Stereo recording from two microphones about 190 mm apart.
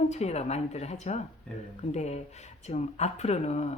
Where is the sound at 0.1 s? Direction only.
35° left (ahead or behind).